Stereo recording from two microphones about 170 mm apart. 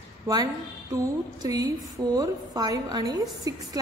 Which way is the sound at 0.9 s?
20° right (ahead or behind).